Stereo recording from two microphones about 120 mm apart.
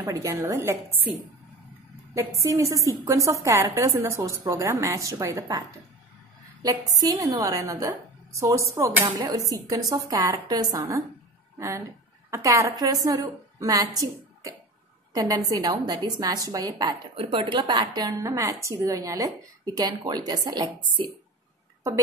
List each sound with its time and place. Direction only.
0.0 s a woman's voice: 25° right (ahead or behind)
2.1 s a woman's voice: 25° right (ahead or behind)
7.0 s a woman's voice: 30° right (ahead or behind)